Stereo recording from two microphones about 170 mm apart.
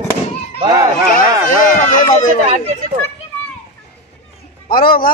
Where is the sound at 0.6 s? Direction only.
25° right (ahead or behind).